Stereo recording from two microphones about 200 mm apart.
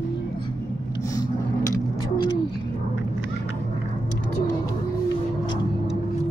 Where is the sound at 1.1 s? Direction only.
15° left (ahead or behind).